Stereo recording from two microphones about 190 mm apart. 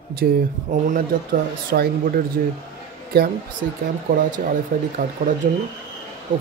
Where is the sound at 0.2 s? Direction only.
55° right (ahead or behind).